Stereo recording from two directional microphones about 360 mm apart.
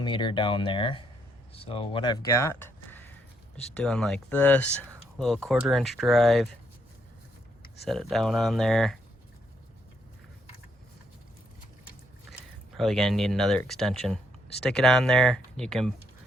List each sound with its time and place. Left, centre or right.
0.0 s speech: centre
7.9 s speech: centre
12.7 s speech: centre